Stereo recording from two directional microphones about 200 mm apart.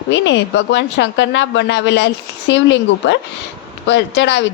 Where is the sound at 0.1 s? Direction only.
65° left (ahead or behind).